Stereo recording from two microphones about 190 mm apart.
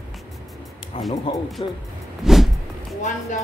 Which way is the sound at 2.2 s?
Centre (ahead or behind).